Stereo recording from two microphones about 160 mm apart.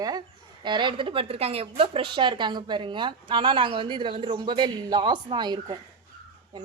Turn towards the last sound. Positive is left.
turn(degrees=-25)  # may be behind; listen again after turning